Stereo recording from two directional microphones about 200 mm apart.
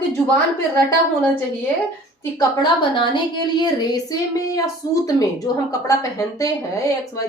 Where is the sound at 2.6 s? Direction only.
20° left (ahead or behind).